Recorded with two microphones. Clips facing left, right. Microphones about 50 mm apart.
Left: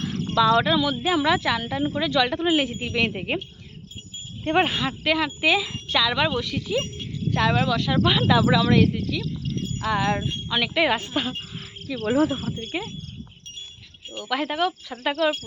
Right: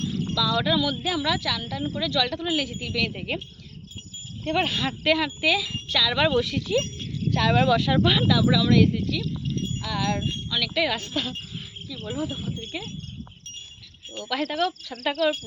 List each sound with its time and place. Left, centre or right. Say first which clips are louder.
0.3 s speech: left 8 dB; left
0.6 s speech: left 2 dB; centre
4.4 s speech: left 4 dB; left
4.8 s speech: even; centre
5.4 s speech: left 2 dB; left
6.1 s speech: right 2 dB; centre
7.3 s cricket: left 1 dB; centre
7.5 s speech: right 2 dB; centre
8.4 s speech: left 2 dB; left
8.8 s speech: even; centre
9.8 s speech: left 5 dB; left
11.9 s speech: left 10 dB; left
12.7 s speech: left 7 dB; left
14.1 s speech: left 2 dB; centre